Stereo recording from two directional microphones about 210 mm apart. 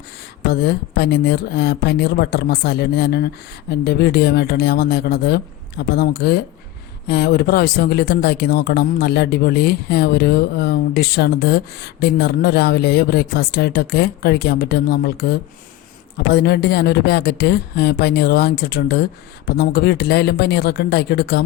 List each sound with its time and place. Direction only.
0.5 s speech: 50° left (ahead or behind)